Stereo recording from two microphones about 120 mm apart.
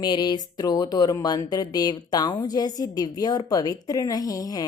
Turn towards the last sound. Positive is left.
turn(degrees=30)  # may be behind; listen again after turning